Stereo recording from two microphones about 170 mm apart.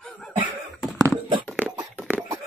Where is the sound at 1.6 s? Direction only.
15° right (ahead or behind).